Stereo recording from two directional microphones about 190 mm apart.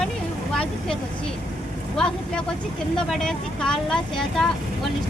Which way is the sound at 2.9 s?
5° left (ahead or behind).